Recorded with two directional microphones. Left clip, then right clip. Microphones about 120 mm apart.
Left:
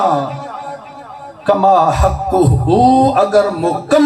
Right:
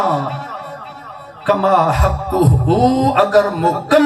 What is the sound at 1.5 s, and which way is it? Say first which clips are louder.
A man's voice: left 3 dB; 40° left (ahead or behind).